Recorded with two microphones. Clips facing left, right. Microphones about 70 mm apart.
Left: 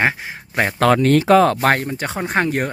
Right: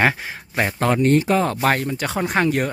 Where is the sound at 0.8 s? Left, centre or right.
Left.